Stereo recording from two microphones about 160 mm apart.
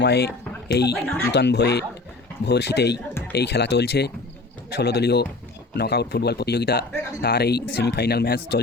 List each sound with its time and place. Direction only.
0.0 s speech: 90° left
0.9 s speech: 10° left (ahead or behind)
1.3 s a man's voice: 90° left